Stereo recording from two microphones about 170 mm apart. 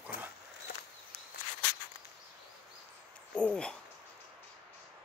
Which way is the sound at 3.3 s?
5° left (ahead or behind).